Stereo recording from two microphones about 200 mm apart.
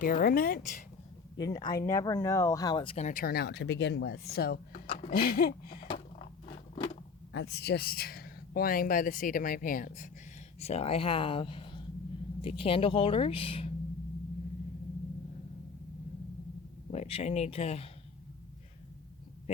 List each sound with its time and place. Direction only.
0.0 s speech: 45° left (ahead or behind)
1.4 s speech: 20° left (ahead or behind); by 4.6 s 50° left (ahead or behind)
4.7 s speech: 35° left (ahead or behind)
7.3 s speech: 60° left (ahead or behind); by 10.1 s 40° left (ahead or behind)
10.6 s speech: 30° left (ahead or behind)
16.9 s speech: 30° left (ahead or behind)